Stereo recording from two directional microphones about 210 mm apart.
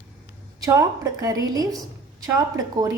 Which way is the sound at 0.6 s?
15° right (ahead or behind).